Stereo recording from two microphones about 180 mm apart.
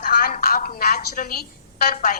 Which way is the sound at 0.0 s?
45° left (ahead or behind).